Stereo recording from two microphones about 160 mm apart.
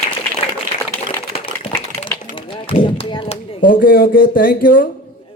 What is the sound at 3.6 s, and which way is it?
Speech, 65° left (ahead or behind).